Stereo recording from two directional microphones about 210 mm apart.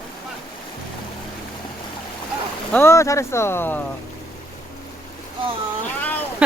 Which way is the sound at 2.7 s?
15° left (ahead or behind).